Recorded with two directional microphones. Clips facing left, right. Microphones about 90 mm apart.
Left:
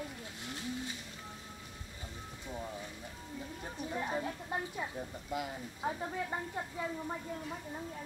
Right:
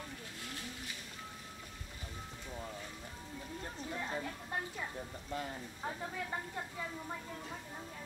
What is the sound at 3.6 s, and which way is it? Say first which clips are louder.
Speech: left 4 dB; 15° left (ahead or behind).